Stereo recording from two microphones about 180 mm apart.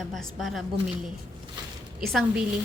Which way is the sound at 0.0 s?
Centre (ahead or behind).